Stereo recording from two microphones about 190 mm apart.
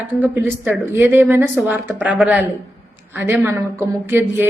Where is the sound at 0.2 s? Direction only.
10° right (ahead or behind).